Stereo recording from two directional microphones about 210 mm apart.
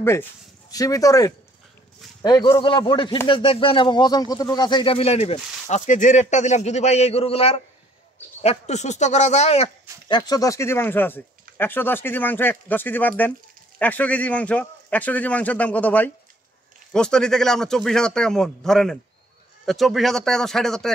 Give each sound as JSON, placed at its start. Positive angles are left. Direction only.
{"t": 0.0, "sound": "a man's voice", "side_deg": 10}
{"t": 10.0, "sound": "a man's voice", "side_deg": 20}